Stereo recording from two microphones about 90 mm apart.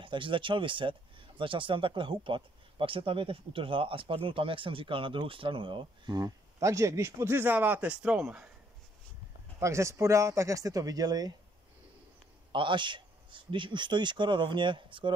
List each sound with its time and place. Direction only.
0.0 s speech: 70° right (ahead or behind); by 6.3 s 50° right (ahead or behind)
6.6 s speech: 35° right (ahead or behind); by 8.5 s 15° right (ahead or behind)
9.6 s speech: 35° right (ahead or behind)
12.5 s a man's voice: 65° right (ahead or behind)